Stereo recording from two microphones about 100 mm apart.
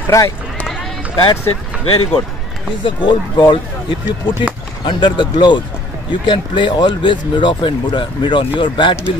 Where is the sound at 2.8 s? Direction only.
50° left (ahead or behind).